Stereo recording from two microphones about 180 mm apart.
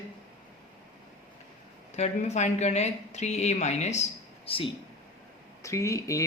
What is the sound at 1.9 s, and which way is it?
Speech, 40° left (ahead or behind).